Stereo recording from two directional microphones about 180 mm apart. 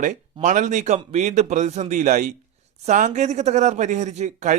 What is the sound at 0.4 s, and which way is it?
Speech, 45° right (ahead or behind).